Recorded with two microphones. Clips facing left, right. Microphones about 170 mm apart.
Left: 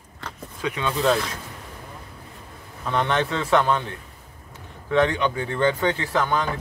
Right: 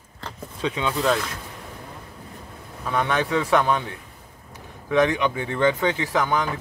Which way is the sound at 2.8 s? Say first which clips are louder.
Left 1 dB; 10° right (ahead or behind).